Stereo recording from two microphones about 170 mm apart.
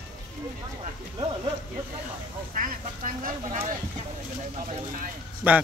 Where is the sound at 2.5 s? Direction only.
55° right (ahead or behind).